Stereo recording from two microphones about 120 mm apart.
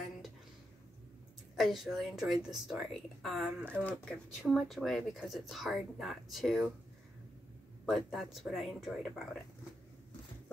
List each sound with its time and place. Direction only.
1.6 s speech: centre (ahead or behind)
3.8 s speech: 10° left (ahead or behind)
7.8 s speech: centre (ahead or behind)